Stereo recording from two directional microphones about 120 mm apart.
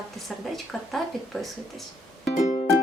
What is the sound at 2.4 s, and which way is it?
Music, 70° left (ahead or behind).